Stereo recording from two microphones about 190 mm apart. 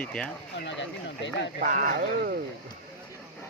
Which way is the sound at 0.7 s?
70° left (ahead or behind).